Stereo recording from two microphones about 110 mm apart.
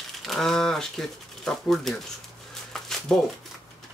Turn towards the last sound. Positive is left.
turn(degrees=5)  # may be behind; listen again after turning